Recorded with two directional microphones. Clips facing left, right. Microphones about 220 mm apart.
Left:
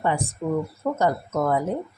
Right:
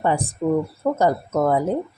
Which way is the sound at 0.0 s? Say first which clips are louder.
Right 4 dB; 35° right (ahead or behind).